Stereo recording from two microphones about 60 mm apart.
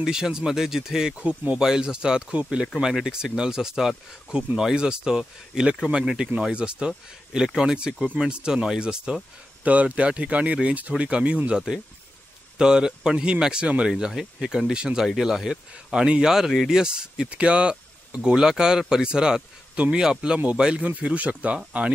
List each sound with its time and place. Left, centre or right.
0.0 s speech: centre
20.8 s speech: right